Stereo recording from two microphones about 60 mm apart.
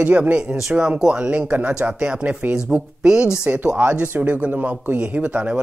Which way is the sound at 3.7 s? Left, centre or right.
Right.